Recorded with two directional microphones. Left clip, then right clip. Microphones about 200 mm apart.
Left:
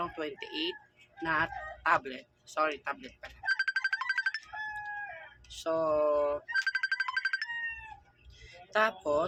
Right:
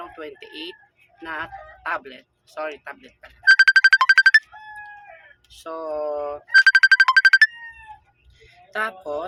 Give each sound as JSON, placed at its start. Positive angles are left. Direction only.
{"t": 0.0, "sound": "speech", "side_deg": 15}
{"t": 3.5, "sound": "music", "side_deg": -50}
{"t": 5.5, "sound": "speech", "side_deg": 15}
{"t": 6.5, "sound": "ringtone", "side_deg": -50}
{"t": 8.4, "sound": "speech", "side_deg": 10}